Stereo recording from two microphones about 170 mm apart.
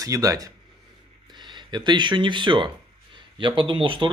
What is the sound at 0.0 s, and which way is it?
Speech, 20° right (ahead or behind).